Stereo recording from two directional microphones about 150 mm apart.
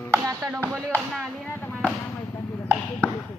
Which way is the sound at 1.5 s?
15° left (ahead or behind).